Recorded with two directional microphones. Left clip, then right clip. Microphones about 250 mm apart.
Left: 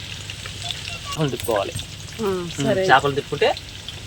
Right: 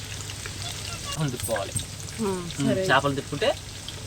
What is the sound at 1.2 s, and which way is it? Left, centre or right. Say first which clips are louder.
Speech: left 8 dB; left.